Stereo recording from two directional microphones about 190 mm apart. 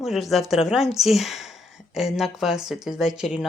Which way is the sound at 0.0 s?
Centre (ahead or behind).